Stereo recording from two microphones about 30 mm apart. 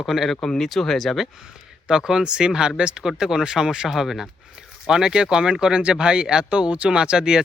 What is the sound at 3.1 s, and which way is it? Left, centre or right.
Speech, centre.